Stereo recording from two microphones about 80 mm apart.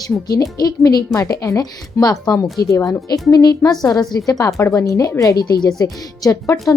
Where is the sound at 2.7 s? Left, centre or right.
Left.